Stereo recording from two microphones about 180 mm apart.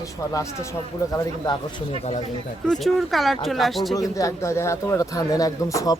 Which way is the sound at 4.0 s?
20° left (ahead or behind).